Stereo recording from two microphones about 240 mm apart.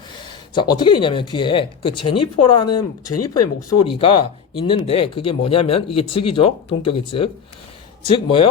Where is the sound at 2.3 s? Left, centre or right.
Left.